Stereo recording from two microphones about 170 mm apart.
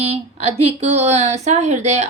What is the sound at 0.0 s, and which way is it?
A woman's voice, 35° right (ahead or behind).